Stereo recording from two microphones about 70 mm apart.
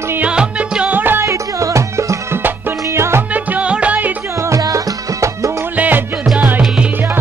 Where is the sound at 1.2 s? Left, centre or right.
Right.